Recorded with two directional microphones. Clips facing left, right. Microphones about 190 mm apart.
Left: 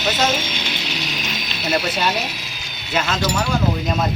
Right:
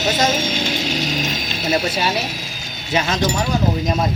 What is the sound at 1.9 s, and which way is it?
Speech, 10° right (ahead or behind).